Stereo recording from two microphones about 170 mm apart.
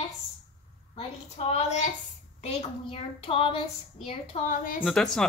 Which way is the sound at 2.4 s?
30° left (ahead or behind).